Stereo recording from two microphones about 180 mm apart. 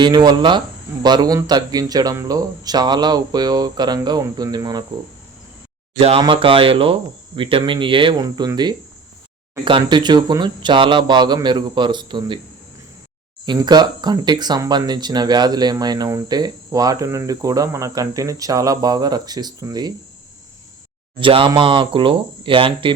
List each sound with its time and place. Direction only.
0.0 s speech: 25° right (ahead or behind)
6.0 s speech: 30° right (ahead or behind)
13.4 s speech: 25° right (ahead or behind)
21.2 s speech: 30° right (ahead or behind)